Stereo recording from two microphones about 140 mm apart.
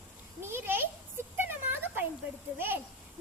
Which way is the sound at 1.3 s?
15° right (ahead or behind).